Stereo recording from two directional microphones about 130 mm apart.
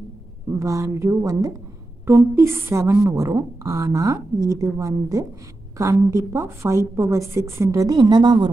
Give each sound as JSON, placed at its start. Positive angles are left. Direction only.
{"t": 0.5, "sound": "a woman's voice", "side_deg": -25}